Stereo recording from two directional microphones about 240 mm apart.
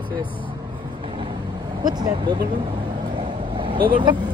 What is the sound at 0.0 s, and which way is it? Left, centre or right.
Speech, centre.